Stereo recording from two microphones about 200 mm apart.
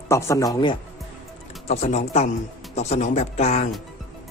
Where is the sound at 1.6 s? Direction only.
35° left (ahead or behind).